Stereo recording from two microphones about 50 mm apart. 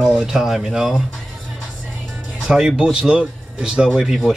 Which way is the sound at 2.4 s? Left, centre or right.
Centre.